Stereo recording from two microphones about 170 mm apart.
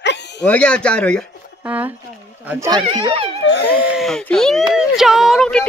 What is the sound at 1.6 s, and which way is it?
Speech, 10° right (ahead or behind).